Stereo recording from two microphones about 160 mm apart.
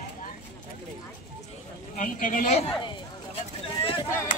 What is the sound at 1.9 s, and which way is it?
Speech, 55° left (ahead or behind).